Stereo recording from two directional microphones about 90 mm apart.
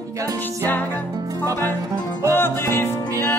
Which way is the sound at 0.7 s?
20° left (ahead or behind).